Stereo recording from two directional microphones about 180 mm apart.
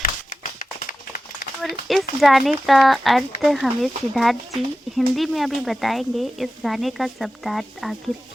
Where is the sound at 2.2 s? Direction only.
Centre (ahead or behind).